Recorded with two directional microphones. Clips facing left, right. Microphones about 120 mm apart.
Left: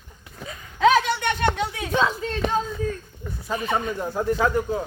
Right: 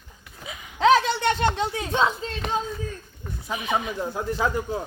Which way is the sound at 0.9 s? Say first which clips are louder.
Right 2 dB; 30° right (ahead or behind).